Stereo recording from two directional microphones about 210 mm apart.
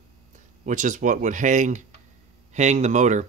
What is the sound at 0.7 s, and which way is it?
Speech, 35° right (ahead or behind).